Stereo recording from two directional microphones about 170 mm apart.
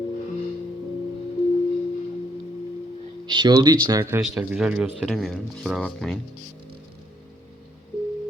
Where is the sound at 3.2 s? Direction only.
25° right (ahead or behind).